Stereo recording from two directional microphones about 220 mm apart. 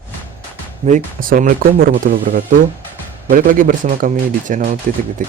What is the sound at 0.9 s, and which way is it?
Speech, 35° right (ahead or behind).